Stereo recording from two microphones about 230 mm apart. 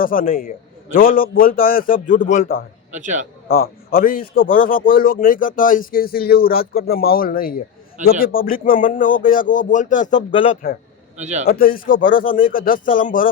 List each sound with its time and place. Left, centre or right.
0.0 s speech: left
2.9 s a man's voice: right
3.5 s speech: left
10.1 s speech: centre
10.4 s speech: left
11.2 s a man's voice: right
11.4 s speech: left